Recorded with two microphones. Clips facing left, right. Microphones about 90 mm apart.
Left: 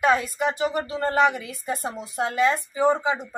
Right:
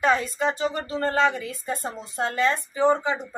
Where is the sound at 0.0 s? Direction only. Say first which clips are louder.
Left 1 dB; 10° left (ahead or behind).